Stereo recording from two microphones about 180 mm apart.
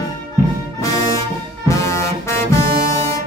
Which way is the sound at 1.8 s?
15° left (ahead or behind).